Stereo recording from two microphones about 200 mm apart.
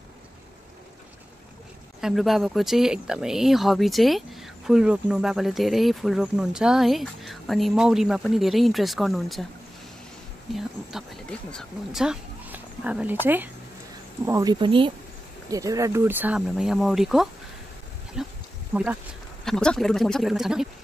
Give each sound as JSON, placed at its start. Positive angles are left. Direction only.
{"t": 2.0, "sound": "speech", "side_deg": 0}
{"t": 10.5, "sound": "speech", "side_deg": 0}